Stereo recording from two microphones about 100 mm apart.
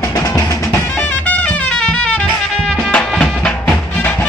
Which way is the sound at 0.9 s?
15° left (ahead or behind).